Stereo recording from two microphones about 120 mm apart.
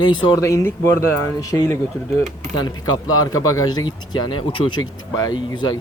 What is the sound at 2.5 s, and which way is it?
Speech, 35° left (ahead or behind).